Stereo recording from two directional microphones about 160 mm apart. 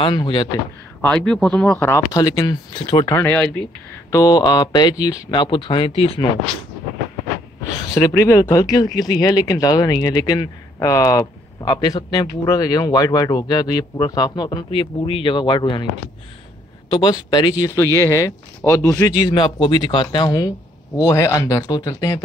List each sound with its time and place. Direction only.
0.0 s speech: 30° left (ahead or behind)
1.0 s speech: 5° left (ahead or behind); by 3.1 s 30° left (ahead or behind)
3.1 s speech: 15° left (ahead or behind)
4.1 s speech: 25° left (ahead or behind)
7.9 s speech: 20° left (ahead or behind)
16.9 s speech: 25° left (ahead or behind)